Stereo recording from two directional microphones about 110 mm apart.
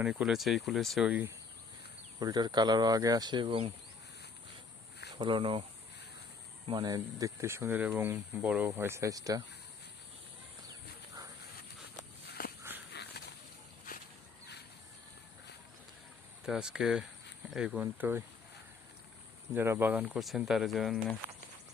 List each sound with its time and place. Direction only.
0.0 s speech: 10° right (ahead or behind)
2.1 s speech: 40° right (ahead or behind); by 3.7 s 55° right (ahead or behind)
5.1 s speech: 45° right (ahead or behind)
6.7 s speech: 40° right (ahead or behind)
12.7 s a sound: 20° right (ahead or behind)
16.5 s speech: 5° right (ahead or behind)
17.7 s speech: 15° right (ahead or behind)
19.5 s speech: 20° right (ahead or behind)
20.1 s speech: centre (ahead or behind)